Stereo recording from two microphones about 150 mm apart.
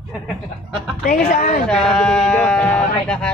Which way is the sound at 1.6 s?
5° left (ahead or behind).